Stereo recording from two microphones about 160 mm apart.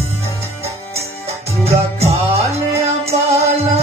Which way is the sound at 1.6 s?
40° right (ahead or behind).